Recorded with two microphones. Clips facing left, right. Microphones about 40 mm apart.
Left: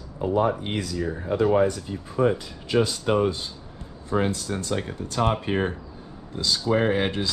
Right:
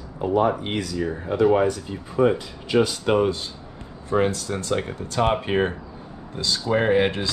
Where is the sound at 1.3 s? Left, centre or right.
Right.